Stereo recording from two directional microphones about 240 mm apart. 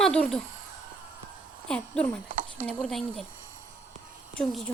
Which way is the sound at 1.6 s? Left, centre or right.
Centre.